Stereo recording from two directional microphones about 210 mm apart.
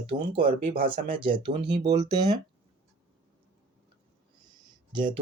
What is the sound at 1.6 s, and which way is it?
Speech, 55° right (ahead or behind).